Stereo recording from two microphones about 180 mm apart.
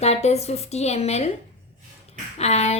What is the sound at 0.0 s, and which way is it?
A woman's voice, 35° left (ahead or behind).